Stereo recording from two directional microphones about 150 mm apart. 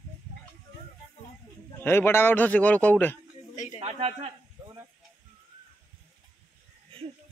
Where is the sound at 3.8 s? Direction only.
45° right (ahead or behind).